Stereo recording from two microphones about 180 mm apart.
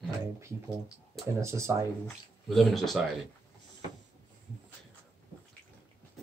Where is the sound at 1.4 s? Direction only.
15° right (ahead or behind).